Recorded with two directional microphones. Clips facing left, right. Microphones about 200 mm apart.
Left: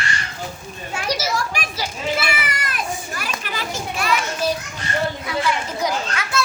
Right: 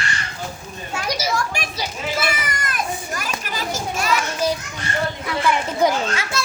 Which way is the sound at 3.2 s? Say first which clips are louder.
Right 1 dB; 40° right (ahead or behind).